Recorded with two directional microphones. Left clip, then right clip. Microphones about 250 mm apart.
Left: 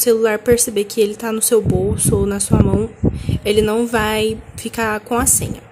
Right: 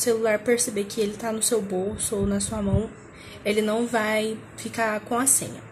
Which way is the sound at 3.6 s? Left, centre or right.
Left.